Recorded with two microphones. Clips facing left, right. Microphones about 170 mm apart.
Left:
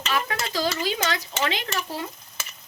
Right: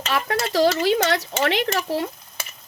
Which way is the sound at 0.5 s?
75° right (ahead or behind).